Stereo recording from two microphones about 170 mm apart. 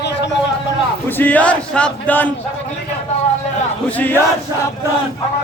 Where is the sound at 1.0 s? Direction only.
10° left (ahead or behind).